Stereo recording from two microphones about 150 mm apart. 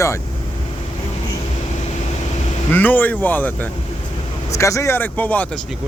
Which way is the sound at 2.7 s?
10° left (ahead or behind).